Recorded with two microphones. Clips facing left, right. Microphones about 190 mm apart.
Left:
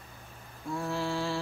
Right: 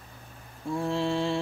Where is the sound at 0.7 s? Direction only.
25° right (ahead or behind).